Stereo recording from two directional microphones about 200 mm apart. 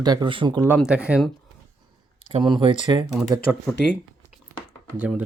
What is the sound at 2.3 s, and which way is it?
Speech, 25° right (ahead or behind).